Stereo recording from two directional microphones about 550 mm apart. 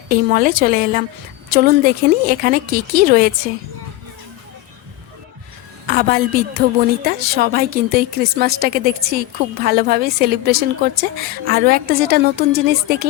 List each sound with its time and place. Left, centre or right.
0.1 s a woman's voice: centre
5.9 s a woman's voice: centre